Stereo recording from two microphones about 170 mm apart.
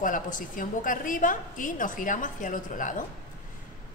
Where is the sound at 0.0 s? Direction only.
50° left (ahead or behind).